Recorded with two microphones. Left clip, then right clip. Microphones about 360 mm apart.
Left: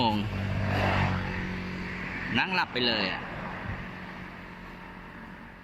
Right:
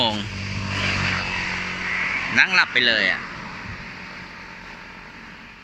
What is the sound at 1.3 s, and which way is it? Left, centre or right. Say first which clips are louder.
Vehicle: right 11 dB; right.